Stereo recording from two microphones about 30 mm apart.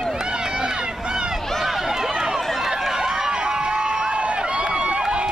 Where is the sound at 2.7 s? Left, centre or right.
Centre.